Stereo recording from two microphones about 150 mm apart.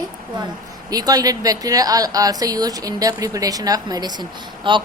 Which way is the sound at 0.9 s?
25° right (ahead or behind).